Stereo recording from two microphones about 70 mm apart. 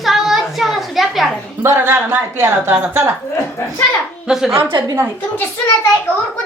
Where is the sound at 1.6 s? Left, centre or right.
Right.